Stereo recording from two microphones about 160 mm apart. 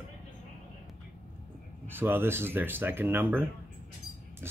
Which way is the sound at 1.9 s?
15° right (ahead or behind).